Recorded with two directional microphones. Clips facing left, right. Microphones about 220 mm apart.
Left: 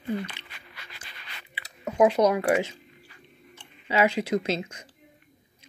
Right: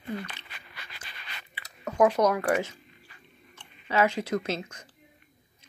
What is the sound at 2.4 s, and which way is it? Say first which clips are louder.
Speech: left 3 dB; 15° left (ahead or behind).